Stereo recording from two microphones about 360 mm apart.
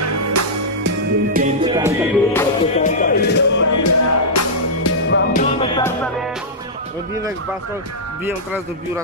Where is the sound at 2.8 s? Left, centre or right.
Left.